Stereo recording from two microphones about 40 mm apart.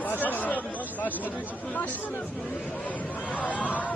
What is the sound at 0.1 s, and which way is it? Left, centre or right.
Chatter, left.